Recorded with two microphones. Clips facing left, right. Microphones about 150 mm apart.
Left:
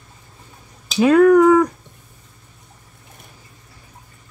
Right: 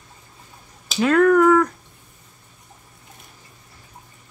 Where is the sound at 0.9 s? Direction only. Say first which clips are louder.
Left 4 dB; 15° left (ahead or behind).